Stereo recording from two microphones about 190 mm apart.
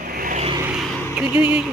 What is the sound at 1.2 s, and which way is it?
Speech, 5° right (ahead or behind).